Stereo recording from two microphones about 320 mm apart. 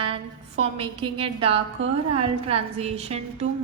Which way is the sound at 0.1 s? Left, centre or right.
Centre.